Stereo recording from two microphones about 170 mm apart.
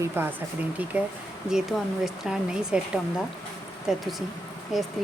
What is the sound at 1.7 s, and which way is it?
Speech, centre (ahead or behind).